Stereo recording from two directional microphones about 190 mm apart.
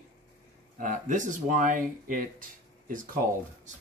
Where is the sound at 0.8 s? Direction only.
40° right (ahead or behind).